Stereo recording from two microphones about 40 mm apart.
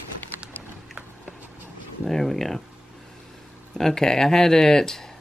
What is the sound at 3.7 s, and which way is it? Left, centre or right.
Speech, centre.